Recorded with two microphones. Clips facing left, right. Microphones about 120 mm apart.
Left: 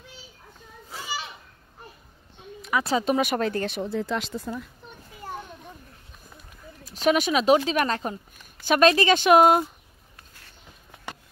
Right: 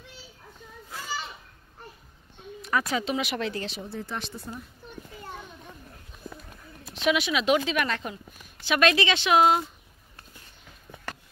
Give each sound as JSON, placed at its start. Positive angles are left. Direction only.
{"t": 1.0, "sound": "children playing", "side_deg": 10}
{"t": 2.8, "sound": "speech", "side_deg": 30}
{"t": 3.1, "sound": "speech", "side_deg": 50}
{"t": 3.8, "sound": "speech", "side_deg": 90}
{"t": 6.8, "sound": "speech", "side_deg": 40}